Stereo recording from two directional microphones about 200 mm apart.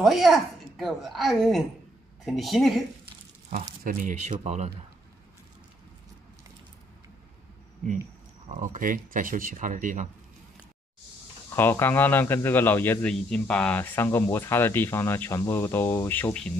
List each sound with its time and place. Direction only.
0.0 s speech: centre (ahead or behind)
3.8 s speech: 40° right (ahead or behind)
8.5 s speech: 40° right (ahead or behind)
11.5 s a man's voice: 10° left (ahead or behind)